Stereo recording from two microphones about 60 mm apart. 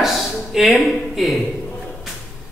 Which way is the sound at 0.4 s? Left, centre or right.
Centre.